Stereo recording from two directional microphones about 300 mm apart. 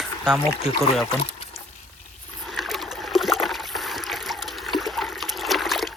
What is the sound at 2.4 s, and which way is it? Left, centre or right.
Trickle, centre.